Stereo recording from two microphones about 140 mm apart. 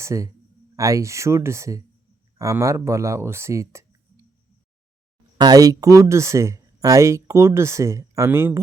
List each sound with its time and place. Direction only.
0.0 s speech: 20° right (ahead or behind)
5.4 s speech: 25° right (ahead or behind)